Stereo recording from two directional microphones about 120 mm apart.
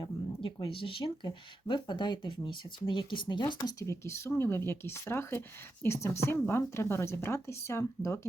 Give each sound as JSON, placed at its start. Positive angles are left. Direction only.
{"t": 0.0, "sound": "speech", "side_deg": 45}
{"t": 3.6, "sound": "speech", "side_deg": 25}